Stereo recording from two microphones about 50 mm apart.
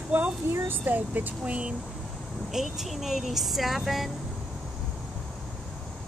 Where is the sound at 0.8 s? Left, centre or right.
Right.